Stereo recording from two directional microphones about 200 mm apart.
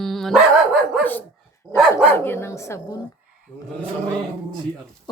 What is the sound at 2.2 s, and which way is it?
Speech, 10° left (ahead or behind).